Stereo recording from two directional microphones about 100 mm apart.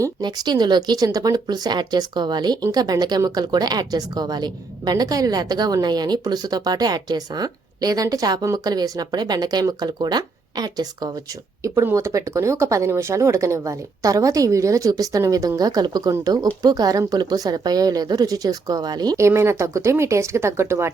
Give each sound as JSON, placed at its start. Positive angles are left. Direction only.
{"t": 0.0, "sound": "a woman's voice", "side_deg": -45}
{"t": 11.6, "sound": "a woman's voice", "side_deg": -30}
{"t": 19.1, "sound": "speech", "side_deg": -30}